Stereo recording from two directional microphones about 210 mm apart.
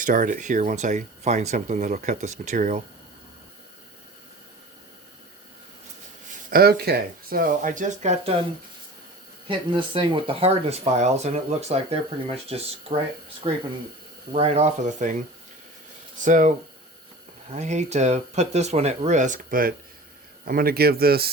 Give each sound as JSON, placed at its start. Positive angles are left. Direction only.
{"t": 0.0, "sound": "speech", "side_deg": -40}
{"t": 6.5, "sound": "speech", "side_deg": -45}
{"t": 9.5, "sound": "speech", "side_deg": -25}
{"t": 14.3, "sound": "speech", "side_deg": -30}
{"t": 16.2, "sound": "speech", "side_deg": -35}